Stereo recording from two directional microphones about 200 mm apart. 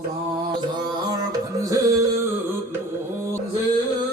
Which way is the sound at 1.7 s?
15° right (ahead or behind).